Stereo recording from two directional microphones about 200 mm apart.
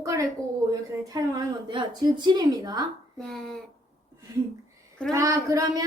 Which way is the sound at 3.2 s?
Centre (ahead or behind).